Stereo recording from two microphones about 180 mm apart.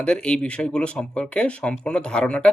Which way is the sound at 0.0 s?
5° left (ahead or behind).